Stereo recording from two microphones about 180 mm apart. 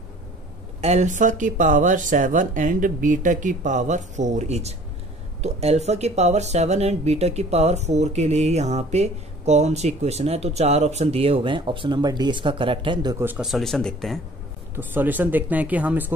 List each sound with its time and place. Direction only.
0.7 s speech: 35° right (ahead or behind)
13.2 s speech: 5° right (ahead or behind)
14.8 s speech: 10° right (ahead or behind)